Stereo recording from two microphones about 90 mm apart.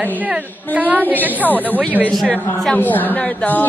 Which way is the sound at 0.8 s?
20° right (ahead or behind).